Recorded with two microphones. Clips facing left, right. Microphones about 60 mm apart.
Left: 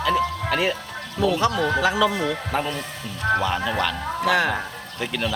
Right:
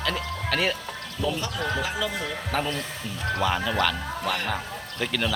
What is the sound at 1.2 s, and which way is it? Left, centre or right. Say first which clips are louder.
Speech: left 8 dB; left.